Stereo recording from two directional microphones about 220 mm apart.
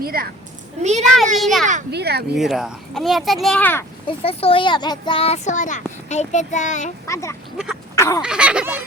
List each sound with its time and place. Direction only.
0.0 s speech: 40° right (ahead or behind)
0.8 s a child's voice: 30° right (ahead or behind)
1.4 s speech: centre (ahead or behind)
1.9 s speech: 50° right (ahead or behind)
2.3 s speech: centre (ahead or behind)
4.0 s a child's voice: 25° left (ahead or behind)
7.1 s speech: 15° left (ahead or behind)
7.9 s fowl: 15° left (ahead or behind)
8.2 s speech: 5° right (ahead or behind)